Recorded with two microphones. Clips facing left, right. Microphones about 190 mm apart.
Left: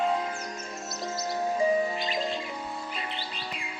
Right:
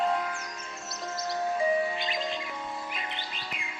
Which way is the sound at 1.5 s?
40° left (ahead or behind).